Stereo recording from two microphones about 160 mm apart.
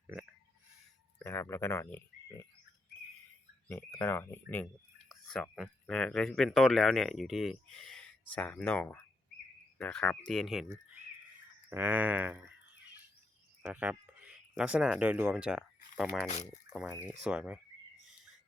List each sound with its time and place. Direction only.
1.2 s speech: 15° left (ahead or behind)
3.7 s speech: 10° left (ahead or behind)
11.7 s speech: 10° right (ahead or behind)
13.6 s speech: 10° right (ahead or behind)
17.2 s speech: 5° right (ahead or behind)